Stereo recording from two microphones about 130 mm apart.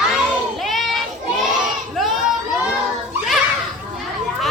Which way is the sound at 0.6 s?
Centre (ahead or behind).